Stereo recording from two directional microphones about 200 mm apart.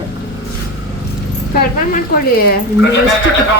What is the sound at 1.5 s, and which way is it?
Speech, 50° left (ahead or behind).